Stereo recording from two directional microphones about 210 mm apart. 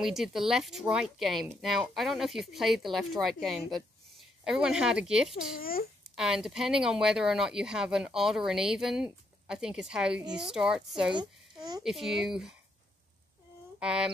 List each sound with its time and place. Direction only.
0.0 s speech: centre (ahead or behind)
5.6 s a child's voice: 45° left (ahead or behind)
6.1 s speech: 5° right (ahead or behind)
11.1 s a child's voice: 20° right (ahead or behind)
11.8 s speech: centre (ahead or behind)
13.7 s speech: 5° right (ahead or behind)